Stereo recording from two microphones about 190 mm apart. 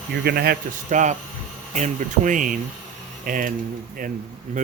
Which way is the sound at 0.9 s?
40° right (ahead or behind).